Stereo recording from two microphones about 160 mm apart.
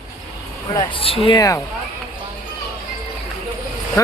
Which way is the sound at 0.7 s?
30° left (ahead or behind).